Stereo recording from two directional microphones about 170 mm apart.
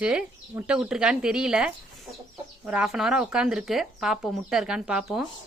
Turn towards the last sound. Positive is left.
turn(degrees=-5)  # may be behind; listen again after turning